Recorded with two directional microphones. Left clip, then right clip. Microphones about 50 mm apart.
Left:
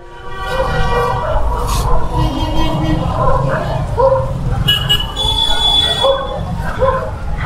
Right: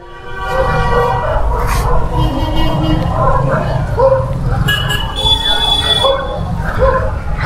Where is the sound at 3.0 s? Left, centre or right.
Left.